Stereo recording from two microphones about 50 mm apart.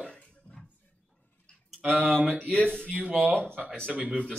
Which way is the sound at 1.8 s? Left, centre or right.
Right.